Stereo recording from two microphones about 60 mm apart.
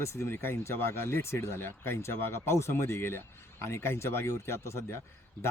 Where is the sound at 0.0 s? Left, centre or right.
Left.